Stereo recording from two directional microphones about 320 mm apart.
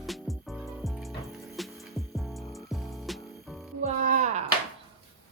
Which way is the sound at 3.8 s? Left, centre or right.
Right.